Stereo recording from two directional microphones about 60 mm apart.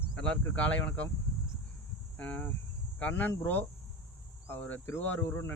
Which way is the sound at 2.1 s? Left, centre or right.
Left.